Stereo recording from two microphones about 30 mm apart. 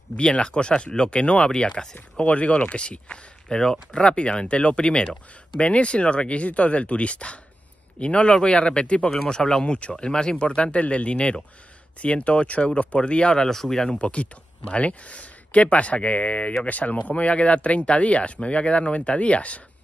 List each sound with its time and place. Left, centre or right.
0.2 s speech: left
2.2 s speech: left
9.3 s speech: left
9.7 s speech: left
13.4 s speech: centre
13.9 s speech: left
16.6 s speech: left
17.1 s speech: left